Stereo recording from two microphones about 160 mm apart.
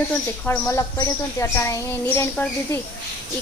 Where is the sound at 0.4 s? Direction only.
20° left (ahead or behind).